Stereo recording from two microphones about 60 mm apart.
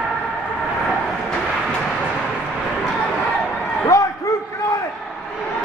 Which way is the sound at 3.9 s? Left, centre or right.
Left.